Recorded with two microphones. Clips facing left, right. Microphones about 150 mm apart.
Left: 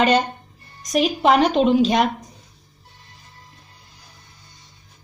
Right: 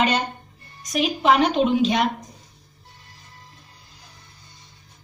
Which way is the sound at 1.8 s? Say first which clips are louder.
Left 3 dB; 40° left (ahead or behind).